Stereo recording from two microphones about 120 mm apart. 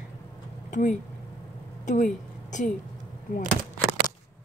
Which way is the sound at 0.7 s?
90° left.